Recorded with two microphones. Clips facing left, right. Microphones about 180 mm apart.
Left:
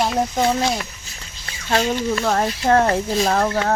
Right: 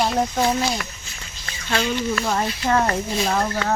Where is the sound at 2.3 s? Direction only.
50° left (ahead or behind).